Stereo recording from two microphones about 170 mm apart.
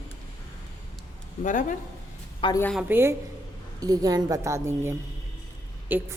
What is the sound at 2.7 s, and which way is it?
A woman's voice, 10° right (ahead or behind).